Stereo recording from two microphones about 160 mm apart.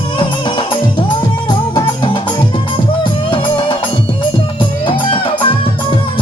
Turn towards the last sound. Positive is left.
turn(degrees=30)  # may be behind; listen again after turning